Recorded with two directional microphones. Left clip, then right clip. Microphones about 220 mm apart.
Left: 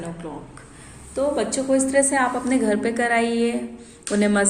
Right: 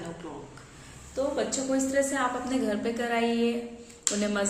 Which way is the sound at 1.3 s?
35° left (ahead or behind).